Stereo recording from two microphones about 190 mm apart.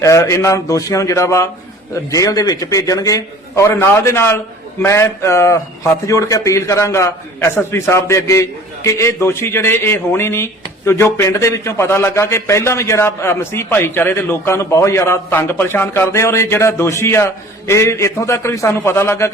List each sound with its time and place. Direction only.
0.0 s a man's voice: 15° left (ahead or behind)